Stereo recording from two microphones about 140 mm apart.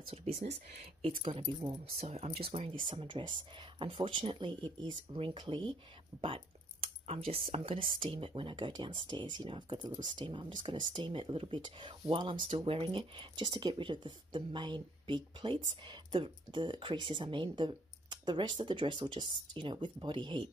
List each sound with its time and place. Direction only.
0.0 s speech: 45° right (ahead or behind)